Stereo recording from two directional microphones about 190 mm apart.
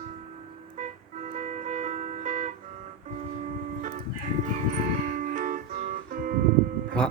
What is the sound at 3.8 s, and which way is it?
Music, 45° right (ahead or behind).